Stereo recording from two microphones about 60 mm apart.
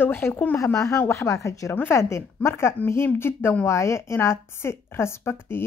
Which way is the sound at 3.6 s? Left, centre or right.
Left.